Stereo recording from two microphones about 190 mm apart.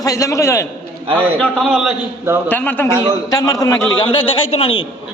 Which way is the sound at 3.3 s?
20° left (ahead or behind).